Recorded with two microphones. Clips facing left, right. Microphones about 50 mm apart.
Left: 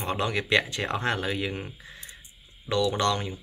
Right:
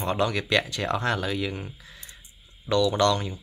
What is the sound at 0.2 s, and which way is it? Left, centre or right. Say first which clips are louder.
Speech: left 1 dB; left.